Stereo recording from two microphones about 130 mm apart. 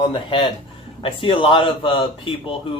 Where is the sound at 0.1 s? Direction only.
40° left (ahead or behind).